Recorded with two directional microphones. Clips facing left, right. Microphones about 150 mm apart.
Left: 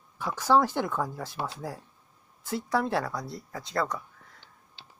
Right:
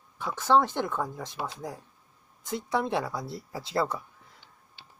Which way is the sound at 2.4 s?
5° left (ahead or behind).